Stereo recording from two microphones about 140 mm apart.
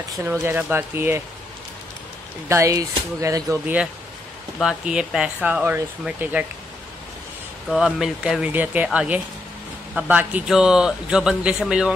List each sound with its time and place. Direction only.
0.1 s speech: 20° right (ahead or behind)
2.4 s speech: 20° right (ahead or behind)
4.6 s speech: 5° right (ahead or behind)
7.7 s a man's voice: 5° right (ahead or behind)